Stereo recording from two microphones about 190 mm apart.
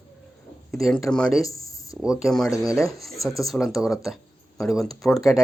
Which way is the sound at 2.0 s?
5° right (ahead or behind).